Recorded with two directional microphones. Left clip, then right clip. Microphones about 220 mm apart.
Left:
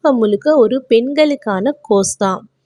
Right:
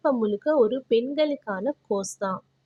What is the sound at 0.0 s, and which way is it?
Speech, 35° left (ahead or behind).